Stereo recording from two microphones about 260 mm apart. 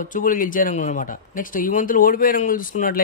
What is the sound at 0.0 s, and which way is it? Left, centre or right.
A man's voice, left.